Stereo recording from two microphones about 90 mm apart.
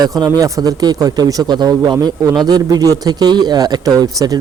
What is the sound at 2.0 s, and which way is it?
A man's voice, 40° right (ahead or behind).